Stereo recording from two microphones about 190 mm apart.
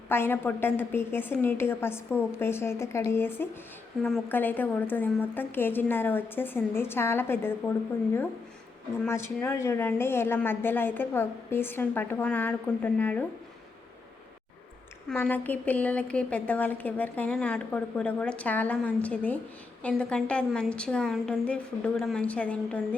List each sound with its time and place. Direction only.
0.1 s a woman's voice: 10° left (ahead or behind)
9.0 s a woman's voice: 15° left (ahead or behind)
15.1 s a woman's voice: 10° left (ahead or behind)